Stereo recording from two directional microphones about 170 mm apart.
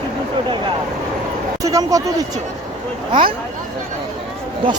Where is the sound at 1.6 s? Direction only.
20° right (ahead or behind).